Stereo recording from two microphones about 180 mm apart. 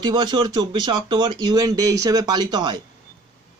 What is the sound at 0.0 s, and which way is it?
Speech, 25° right (ahead or behind).